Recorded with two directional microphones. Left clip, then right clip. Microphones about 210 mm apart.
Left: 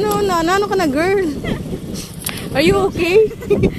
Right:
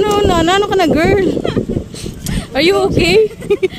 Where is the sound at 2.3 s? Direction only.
15° right (ahead or behind).